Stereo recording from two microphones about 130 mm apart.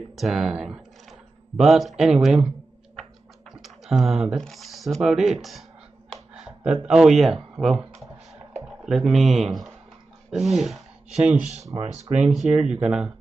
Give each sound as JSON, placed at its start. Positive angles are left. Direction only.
{"t": 0.1, "sound": "speech", "side_deg": 0}
{"t": 8.3, "sound": "a sound", "side_deg": -5}
{"t": 10.3, "sound": "speech", "side_deg": 0}
{"t": 11.1, "sound": "speech", "side_deg": -60}
{"t": 12.1, "sound": "speech", "side_deg": -10}